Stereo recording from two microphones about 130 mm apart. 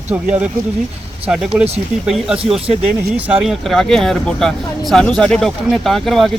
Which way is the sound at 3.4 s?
Centre (ahead or behind).